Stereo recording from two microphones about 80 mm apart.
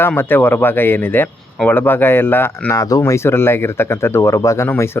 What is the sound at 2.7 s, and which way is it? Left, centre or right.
Speech, left.